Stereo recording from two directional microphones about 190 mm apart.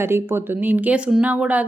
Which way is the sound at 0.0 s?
10° right (ahead or behind).